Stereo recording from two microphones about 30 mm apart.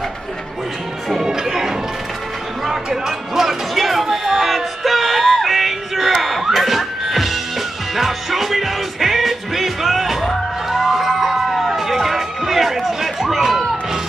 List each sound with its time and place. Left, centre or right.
1.2 s music: centre